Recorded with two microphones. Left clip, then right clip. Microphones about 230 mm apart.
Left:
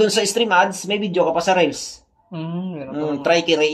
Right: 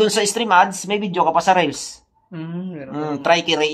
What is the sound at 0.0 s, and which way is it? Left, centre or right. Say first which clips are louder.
A man's voice: left 1 dB; right.